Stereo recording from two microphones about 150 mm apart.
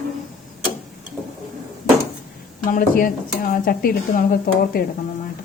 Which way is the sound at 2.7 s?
65° left (ahead or behind).